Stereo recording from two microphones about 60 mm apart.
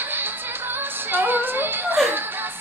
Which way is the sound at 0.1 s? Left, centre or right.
Right.